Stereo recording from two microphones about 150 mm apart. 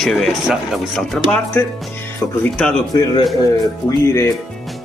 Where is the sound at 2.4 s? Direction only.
5° left (ahead or behind).